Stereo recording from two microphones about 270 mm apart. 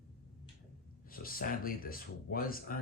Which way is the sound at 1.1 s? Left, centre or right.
Left.